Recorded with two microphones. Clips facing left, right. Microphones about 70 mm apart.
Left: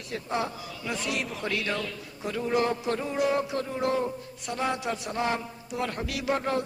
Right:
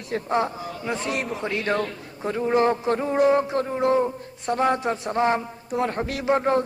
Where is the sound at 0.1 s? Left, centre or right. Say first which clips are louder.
Right 7 dB; right.